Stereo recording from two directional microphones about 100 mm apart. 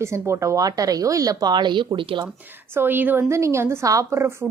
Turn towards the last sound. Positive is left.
turn(degrees=-30)  # may be behind; listen again after turning